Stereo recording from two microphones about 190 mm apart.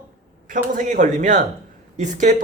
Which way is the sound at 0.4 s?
45° right (ahead or behind).